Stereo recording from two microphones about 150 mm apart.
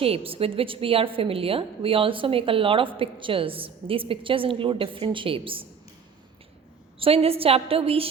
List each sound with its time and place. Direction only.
0.0 s a woman's voice: 40° right (ahead or behind)
7.0 s a woman's voice: 40° right (ahead or behind)